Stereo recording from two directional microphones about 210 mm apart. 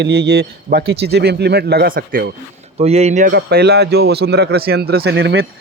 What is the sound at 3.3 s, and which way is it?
Speech, 50° right (ahead or behind).